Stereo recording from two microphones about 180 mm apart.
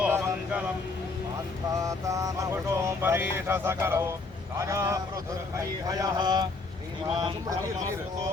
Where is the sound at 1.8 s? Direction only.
20° right (ahead or behind).